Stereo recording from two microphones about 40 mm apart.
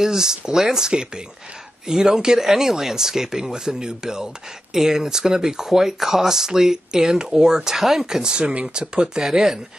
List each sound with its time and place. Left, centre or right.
0.0 s speech: centre
8.3 s speech: right
9.2 s speech: centre